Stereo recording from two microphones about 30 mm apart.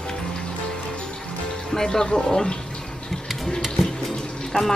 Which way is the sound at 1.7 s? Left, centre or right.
Centre.